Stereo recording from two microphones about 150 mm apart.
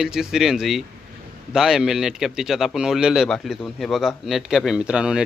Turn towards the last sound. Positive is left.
turn(degrees=-5)  # may be behind; listen again after turning